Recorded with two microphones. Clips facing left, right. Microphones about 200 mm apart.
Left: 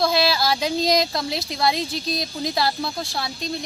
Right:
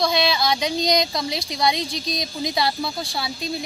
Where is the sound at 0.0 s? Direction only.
5° left (ahead or behind).